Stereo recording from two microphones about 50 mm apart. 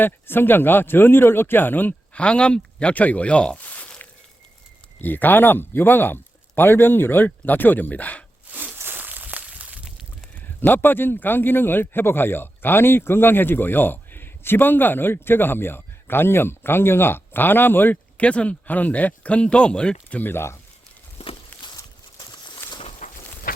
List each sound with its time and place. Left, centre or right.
0.0 s a man's voice: left
2.1 s speech: left
3.6 s a sound: left
4.9 s a man's voice: left
8.4 s a sound: right
10.6 s a man's voice: left
18.2 s speech: left
20.1 s speech: left
20.3 s speech: left
21.5 s walk: left
22.6 s a sound: left